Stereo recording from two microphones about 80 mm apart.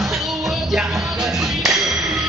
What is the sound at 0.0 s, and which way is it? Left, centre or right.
Music, centre.